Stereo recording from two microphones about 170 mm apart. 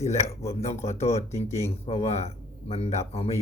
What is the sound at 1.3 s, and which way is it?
Speech, 15° left (ahead or behind).